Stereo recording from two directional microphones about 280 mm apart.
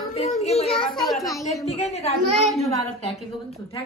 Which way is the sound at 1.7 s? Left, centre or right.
Left.